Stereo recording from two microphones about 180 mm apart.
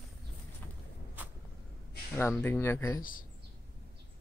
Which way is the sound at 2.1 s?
10° left (ahead or behind).